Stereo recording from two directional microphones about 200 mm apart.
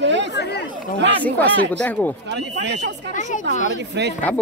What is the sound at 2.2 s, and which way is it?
Speech, 60° right (ahead or behind).